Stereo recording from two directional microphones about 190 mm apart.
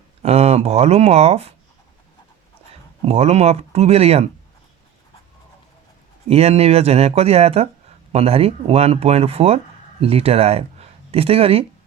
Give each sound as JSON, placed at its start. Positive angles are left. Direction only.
{"t": 0.2, "sound": "speech", "side_deg": -30}
{"t": 3.0, "sound": "speech", "side_deg": -30}
{"t": 6.2, "sound": "speech", "side_deg": -35}